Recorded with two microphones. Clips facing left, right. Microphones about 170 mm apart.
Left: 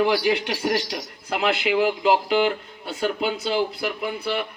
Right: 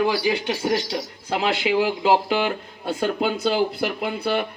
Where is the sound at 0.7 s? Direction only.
30° right (ahead or behind).